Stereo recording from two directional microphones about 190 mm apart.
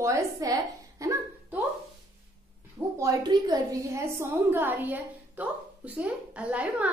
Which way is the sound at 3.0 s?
20° right (ahead or behind).